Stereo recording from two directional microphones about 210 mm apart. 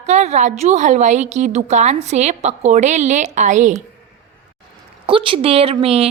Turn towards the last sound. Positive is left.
turn(degrees=-30)  # may be behind; listen again after turning